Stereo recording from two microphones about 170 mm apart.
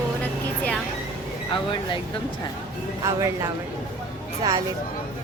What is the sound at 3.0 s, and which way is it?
Speech, 20° right (ahead or behind).